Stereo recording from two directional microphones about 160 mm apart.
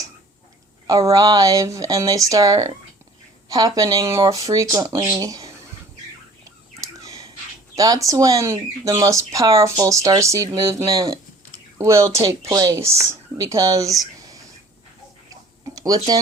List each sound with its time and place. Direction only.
0.9 s speech: 20° right (ahead or behind)
7.0 s a sound: 20° right (ahead or behind)
7.8 s speech: 20° right (ahead or behind)
15.6 s speech: 20° right (ahead or behind)